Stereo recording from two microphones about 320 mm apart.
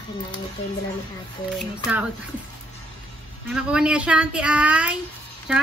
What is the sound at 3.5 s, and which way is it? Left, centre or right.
A woman's voice, centre.